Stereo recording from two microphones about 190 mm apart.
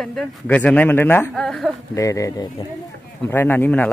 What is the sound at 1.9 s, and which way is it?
A man's voice, 15° left (ahead or behind).